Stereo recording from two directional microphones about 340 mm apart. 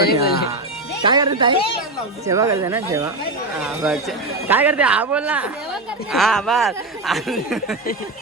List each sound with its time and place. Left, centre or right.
0.0 s speech: left
1.0 s speech: centre
4.4 s speech: centre